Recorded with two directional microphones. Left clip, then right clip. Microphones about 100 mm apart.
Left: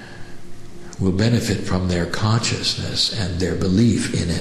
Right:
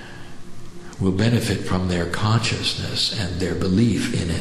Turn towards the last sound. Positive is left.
turn(degrees=5)  # may be behind; listen again after turning